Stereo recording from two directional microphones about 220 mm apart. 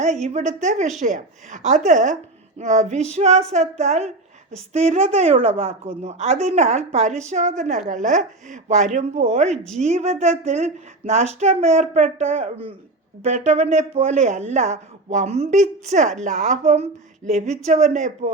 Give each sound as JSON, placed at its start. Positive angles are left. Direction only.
{"t": 0.3, "sound": "speech", "side_deg": -35}